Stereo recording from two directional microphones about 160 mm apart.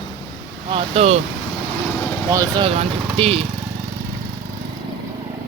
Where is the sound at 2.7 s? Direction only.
40° right (ahead or behind).